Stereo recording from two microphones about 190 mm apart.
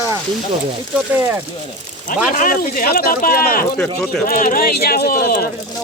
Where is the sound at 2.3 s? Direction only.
45° left (ahead or behind).